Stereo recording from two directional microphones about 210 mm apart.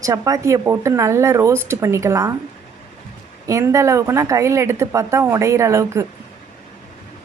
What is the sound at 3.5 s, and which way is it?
Speech, 15° right (ahead or behind).